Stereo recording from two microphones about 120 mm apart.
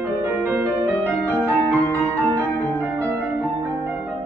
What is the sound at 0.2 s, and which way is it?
Music, 20° right (ahead or behind).